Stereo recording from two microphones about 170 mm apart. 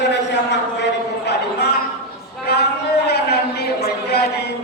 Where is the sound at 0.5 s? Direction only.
85° left.